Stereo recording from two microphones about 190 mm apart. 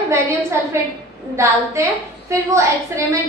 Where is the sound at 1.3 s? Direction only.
15° right (ahead or behind).